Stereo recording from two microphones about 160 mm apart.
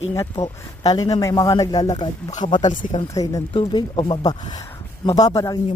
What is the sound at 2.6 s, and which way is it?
Speech, 55° left (ahead or behind).